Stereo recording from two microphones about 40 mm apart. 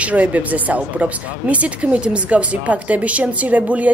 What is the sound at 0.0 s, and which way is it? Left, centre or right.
Speech, right.